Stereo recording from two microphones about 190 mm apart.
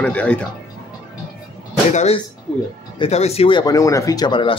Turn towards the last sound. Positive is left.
turn(degrees=25)  # may be behind; listen again after turning